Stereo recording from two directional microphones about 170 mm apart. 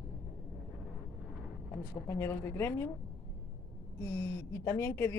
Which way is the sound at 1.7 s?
15° left (ahead or behind).